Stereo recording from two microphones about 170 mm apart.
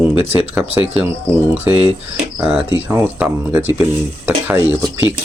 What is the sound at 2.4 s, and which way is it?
Speech, 10° right (ahead or behind).